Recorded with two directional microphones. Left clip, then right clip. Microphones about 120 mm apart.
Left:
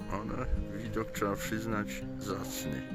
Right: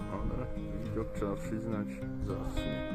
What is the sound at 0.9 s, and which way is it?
Speech, 20° left (ahead or behind).